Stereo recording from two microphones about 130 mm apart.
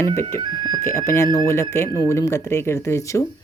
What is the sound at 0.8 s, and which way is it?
Speech, 20° left (ahead or behind).